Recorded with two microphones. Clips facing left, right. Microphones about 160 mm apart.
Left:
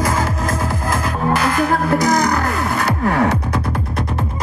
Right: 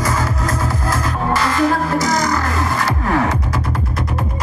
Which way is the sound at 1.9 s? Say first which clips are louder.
Left 2 dB; 60° left (ahead or behind).